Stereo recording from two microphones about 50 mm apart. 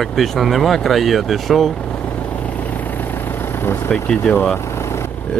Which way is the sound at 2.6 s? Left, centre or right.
Left.